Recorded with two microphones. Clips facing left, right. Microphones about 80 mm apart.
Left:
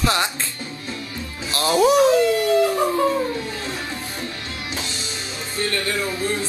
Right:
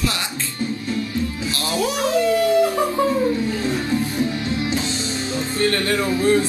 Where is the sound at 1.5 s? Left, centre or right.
Left.